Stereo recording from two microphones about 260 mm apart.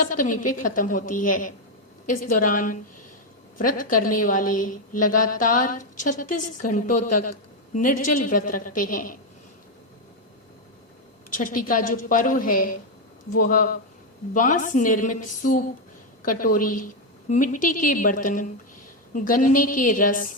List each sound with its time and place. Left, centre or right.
0.0 s a woman's voice: left
4.9 s a woman's voice: left
5.3 s a woman's voice: left
11.3 s a woman's voice: left